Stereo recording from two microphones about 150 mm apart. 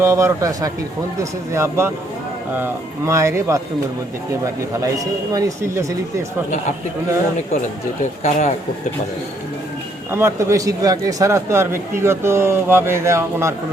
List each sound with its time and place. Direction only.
0.0 s speech: 20° right (ahead or behind)
3.1 s speech: 20° right (ahead or behind)
4.8 s speech: 25° right (ahead or behind)
8.2 s speech: 50° left (ahead or behind)
10.1 s speech: 15° right (ahead or behind)